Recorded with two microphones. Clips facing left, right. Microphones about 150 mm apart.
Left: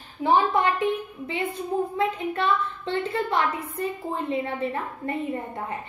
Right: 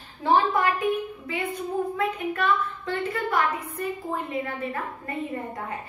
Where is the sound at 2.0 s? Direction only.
25° left (ahead or behind).